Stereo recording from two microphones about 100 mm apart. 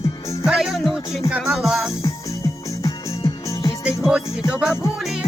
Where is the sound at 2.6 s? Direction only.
30° left (ahead or behind).